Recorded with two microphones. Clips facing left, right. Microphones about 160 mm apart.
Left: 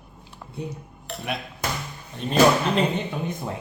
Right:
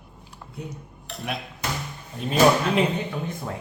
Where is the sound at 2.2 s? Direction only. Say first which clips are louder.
Even; 5° right (ahead or behind).